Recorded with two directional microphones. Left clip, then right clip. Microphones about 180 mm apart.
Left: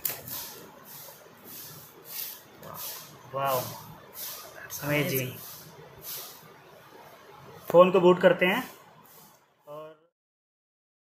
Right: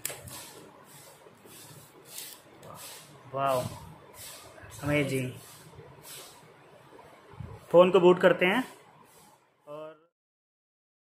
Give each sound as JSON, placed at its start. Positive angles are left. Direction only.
{"t": 3.3, "sound": "speech", "side_deg": -20}
{"t": 4.8, "sound": "speech", "side_deg": -15}
{"t": 7.7, "sound": "speech", "side_deg": -25}
{"t": 9.7, "sound": "a sound", "side_deg": -20}